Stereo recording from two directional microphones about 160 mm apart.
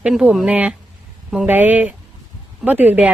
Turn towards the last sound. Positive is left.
turn(degrees=-10)  # may be behind; listen again after turning